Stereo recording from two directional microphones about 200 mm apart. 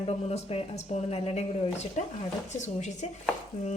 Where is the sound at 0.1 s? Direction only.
30° left (ahead or behind).